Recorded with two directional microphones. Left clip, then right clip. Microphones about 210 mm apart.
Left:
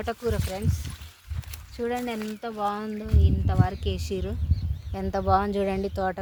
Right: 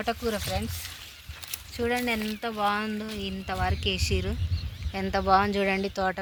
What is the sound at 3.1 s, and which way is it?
Speech, 30° left (ahead or behind).